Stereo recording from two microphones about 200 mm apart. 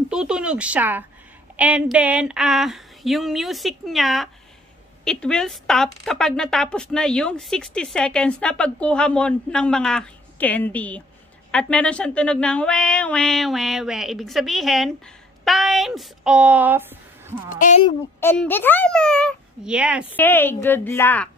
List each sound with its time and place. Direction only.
0.1 s speech: 5° right (ahead or behind)
17.5 s speech: 40° left (ahead or behind)
18.2 s speech: 10° left (ahead or behind); by 20.1 s 5° right (ahead or behind)
20.2 s a woman's voice: 10° left (ahead or behind)